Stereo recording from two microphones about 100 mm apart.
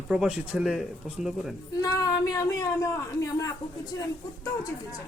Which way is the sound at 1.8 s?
35° left (ahead or behind).